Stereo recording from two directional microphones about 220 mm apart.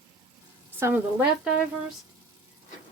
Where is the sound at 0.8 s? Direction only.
10° right (ahead or behind).